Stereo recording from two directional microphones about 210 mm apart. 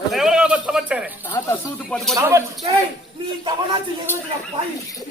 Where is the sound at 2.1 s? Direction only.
15° right (ahead or behind).